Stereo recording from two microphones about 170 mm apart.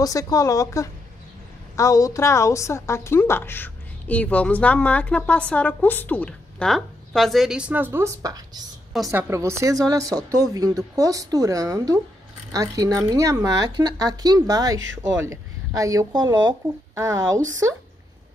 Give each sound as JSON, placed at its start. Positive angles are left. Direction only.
{"t": 0.0, "sound": "a woman's voice", "side_deg": 20}